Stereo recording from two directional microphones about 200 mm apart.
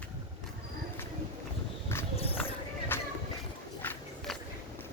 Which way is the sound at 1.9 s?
10° left (ahead or behind).